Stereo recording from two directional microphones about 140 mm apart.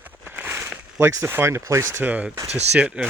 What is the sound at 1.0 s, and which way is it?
Speech, 20° right (ahead or behind).